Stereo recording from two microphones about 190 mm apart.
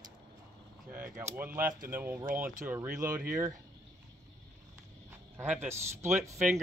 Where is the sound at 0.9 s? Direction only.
10° right (ahead or behind).